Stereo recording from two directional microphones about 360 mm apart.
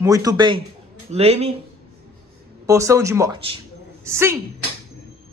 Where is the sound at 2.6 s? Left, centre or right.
Centre.